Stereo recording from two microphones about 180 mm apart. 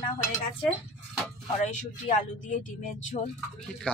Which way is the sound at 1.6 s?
45° left (ahead or behind).